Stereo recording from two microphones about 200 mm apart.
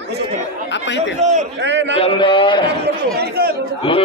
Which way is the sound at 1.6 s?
60° right (ahead or behind).